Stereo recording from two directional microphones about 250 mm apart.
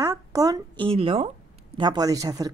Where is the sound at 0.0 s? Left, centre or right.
Centre.